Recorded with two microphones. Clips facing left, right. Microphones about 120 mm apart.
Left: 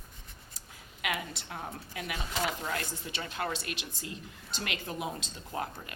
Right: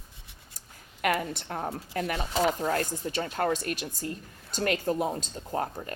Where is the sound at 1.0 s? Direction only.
50° right (ahead or behind).